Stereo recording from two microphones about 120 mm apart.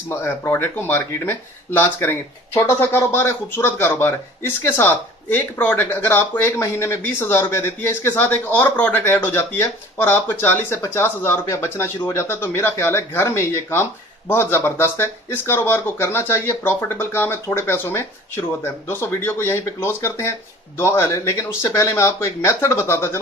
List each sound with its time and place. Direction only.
0.1 s speech: 20° left (ahead or behind)